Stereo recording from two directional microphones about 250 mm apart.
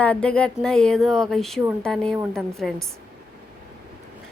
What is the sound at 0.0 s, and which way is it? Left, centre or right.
Speech, centre.